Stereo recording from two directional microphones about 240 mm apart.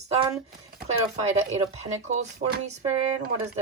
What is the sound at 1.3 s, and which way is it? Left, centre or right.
Speech, right.